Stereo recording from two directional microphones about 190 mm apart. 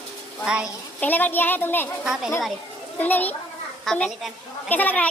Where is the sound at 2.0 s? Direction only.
5° right (ahead or behind).